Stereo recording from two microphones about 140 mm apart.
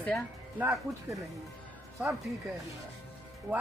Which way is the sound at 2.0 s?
10° right (ahead or behind).